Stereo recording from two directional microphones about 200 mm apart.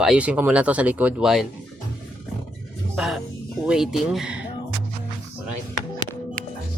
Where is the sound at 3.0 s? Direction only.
Centre (ahead or behind).